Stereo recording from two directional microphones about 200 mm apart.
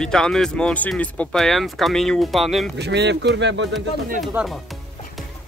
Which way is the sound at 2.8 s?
60° right (ahead or behind).